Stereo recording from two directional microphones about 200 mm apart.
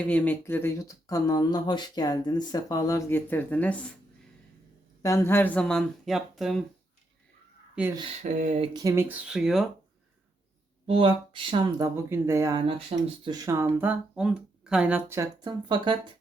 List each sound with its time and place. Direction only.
0.0 s speech: 10° left (ahead or behind)
5.0 s speech: 15° left (ahead or behind)
8.2 s a sound: 35° right (ahead or behind)
8.7 s speech: 15° right (ahead or behind); by 9.6 s centre (ahead or behind)
10.8 s speech: 25° right (ahead or behind)